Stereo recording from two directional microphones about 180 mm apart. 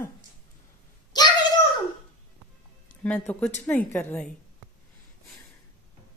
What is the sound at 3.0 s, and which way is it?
A woman's voice, 5° left (ahead or behind).